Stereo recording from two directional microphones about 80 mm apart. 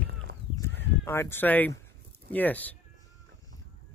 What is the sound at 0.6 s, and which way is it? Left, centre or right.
Speech, left.